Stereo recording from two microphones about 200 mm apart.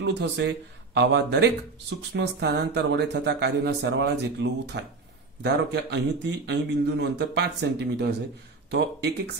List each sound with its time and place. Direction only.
0.0 s speech: 55° right (ahead or behind)